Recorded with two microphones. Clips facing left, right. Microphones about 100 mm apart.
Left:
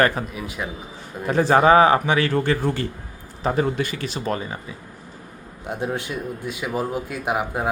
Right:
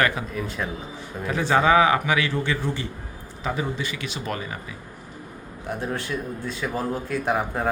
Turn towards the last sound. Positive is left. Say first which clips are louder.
# even
turn(degrees=10)  # may be behind; listen again after turning